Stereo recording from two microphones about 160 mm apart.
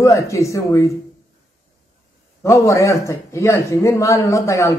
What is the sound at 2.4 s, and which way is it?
Speech, 20° left (ahead or behind).